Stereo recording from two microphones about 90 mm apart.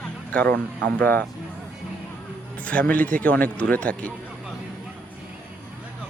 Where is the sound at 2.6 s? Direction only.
15° left (ahead or behind).